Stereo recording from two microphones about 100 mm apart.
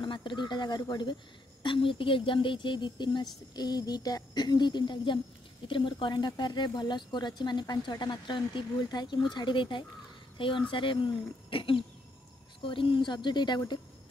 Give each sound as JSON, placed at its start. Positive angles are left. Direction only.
{"t": 0.0, "sound": "speech", "side_deg": 50}
{"t": 1.6, "sound": "a woman's voice", "side_deg": 55}